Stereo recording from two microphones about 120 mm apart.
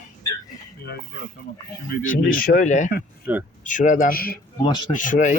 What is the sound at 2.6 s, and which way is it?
Speech, 90° left.